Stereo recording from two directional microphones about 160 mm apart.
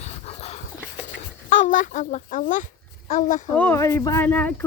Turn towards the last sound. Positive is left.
turn(degrees=10)  # may be behind; listen again after turning